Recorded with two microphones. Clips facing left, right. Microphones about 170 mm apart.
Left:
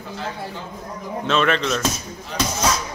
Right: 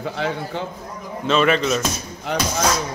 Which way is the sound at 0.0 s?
75° right (ahead or behind).